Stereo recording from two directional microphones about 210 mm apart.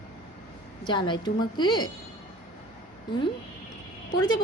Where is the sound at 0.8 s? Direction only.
20° left (ahead or behind).